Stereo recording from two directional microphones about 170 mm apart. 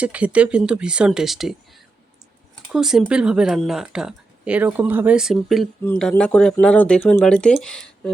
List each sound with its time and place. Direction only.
0.0 s speech: 5° right (ahead or behind)